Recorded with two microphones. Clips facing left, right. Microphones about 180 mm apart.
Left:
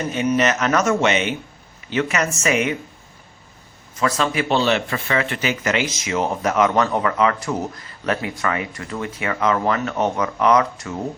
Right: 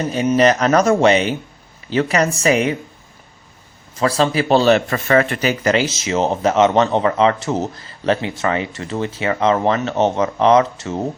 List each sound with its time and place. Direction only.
0.1 s speech: 35° right (ahead or behind)
3.9 s speech: 30° right (ahead or behind)